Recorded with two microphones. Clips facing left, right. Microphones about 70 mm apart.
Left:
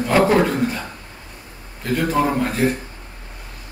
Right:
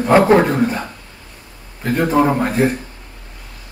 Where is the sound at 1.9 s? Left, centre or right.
Right.